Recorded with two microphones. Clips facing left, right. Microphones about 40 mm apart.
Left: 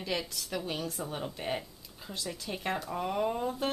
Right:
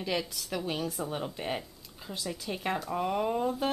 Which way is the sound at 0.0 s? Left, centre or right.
Centre.